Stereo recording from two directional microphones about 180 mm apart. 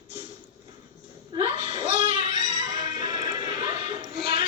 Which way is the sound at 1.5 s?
30° right (ahead or behind).